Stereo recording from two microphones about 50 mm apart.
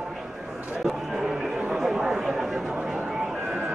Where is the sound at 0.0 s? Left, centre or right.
Centre.